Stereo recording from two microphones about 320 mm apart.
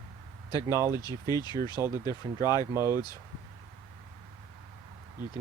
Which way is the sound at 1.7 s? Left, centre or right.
Centre.